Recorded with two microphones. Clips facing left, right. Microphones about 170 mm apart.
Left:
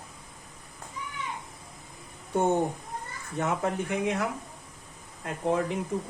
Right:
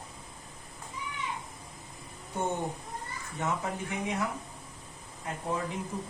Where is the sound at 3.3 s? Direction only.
65° left (ahead or behind).